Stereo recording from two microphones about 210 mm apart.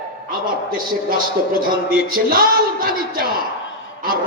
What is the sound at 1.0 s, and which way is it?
Speech, 45° right (ahead or behind).